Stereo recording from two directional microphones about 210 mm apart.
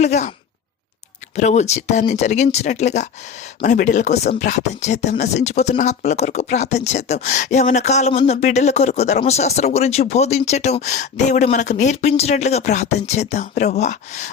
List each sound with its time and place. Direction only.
0.0 s speech: 35° left (ahead or behind)
1.4 s speech: 35° left (ahead or behind)